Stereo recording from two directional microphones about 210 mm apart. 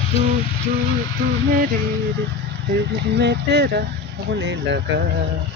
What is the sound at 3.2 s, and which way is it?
Speech, 55° right (ahead or behind).